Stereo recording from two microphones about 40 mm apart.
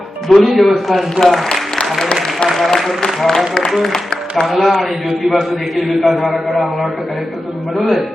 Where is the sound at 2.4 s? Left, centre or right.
Centre.